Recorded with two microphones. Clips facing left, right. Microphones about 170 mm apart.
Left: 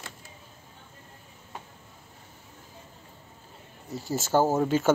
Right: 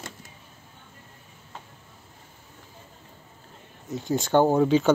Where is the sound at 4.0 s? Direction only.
5° left (ahead or behind).